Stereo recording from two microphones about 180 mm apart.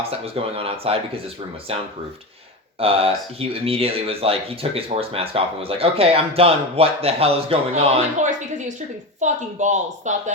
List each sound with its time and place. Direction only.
0.1 s speech: 35° right (ahead or behind)